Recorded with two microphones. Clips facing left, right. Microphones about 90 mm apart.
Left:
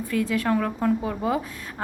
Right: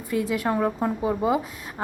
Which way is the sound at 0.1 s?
20° right (ahead or behind).